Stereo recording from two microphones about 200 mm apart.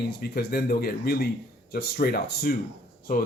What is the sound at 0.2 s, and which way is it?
Speech, 50° left (ahead or behind).